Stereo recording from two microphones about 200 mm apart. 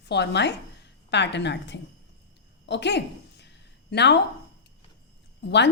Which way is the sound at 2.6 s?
60° left (ahead or behind).